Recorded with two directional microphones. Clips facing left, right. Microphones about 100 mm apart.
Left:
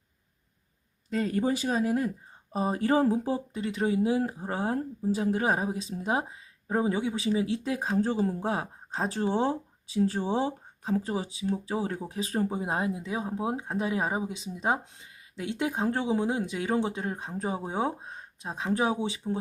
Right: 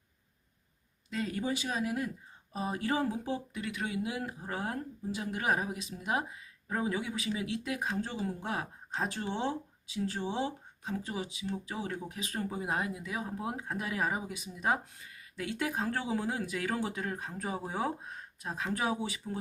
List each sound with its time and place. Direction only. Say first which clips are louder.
1.1 s speech: left 7 dB; 40° left (ahead or behind); by 19.4 s 25° left (ahead or behind)